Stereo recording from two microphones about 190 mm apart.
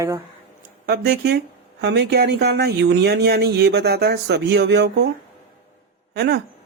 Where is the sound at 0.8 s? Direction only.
55° right (ahead or behind).